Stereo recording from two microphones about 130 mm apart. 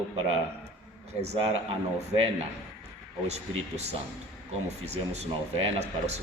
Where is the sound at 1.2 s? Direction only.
55° right (ahead or behind).